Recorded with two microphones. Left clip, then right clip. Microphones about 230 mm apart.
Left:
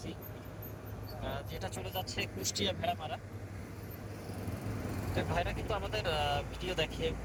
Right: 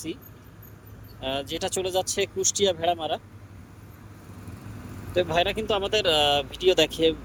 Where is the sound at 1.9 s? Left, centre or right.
Right.